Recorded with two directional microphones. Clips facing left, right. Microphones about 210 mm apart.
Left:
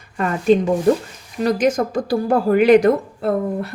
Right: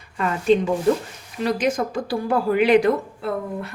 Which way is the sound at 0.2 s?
45° left (ahead or behind).